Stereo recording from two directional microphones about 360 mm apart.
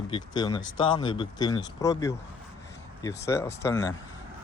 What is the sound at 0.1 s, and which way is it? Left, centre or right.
Speech, centre.